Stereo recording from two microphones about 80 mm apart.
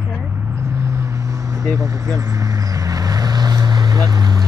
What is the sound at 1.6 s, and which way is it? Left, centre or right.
Speech, right.